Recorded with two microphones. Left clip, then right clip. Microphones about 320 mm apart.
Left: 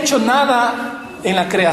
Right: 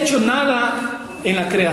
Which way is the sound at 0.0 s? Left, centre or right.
Centre.